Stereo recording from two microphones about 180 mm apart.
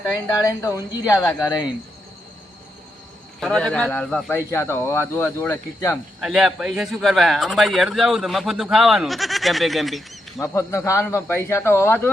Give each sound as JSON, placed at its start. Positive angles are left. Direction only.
{"t": 0.0, "sound": "a woman's voice", "side_deg": 15}
{"t": 3.4, "sound": "speech", "side_deg": 0}
{"t": 6.1, "sound": "speech", "side_deg": -5}
{"t": 10.4, "sound": "speech", "side_deg": 15}